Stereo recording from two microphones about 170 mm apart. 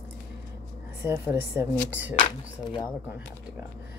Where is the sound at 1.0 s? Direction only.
15° right (ahead or behind).